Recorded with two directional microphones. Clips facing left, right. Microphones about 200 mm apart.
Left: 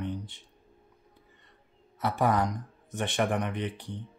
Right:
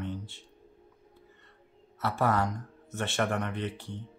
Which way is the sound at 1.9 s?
15° left (ahead or behind).